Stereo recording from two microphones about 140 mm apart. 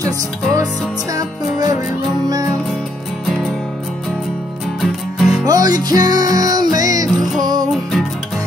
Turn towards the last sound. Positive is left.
turn(degrees=0)  # may be behind; listen again after turning